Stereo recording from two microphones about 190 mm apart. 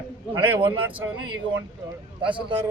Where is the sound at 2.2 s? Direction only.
25° right (ahead or behind).